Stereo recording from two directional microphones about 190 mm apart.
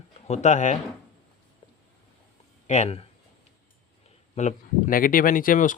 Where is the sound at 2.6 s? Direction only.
35° left (ahead or behind).